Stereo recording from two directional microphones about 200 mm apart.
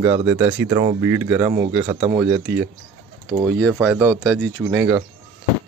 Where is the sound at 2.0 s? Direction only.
25° right (ahead or behind).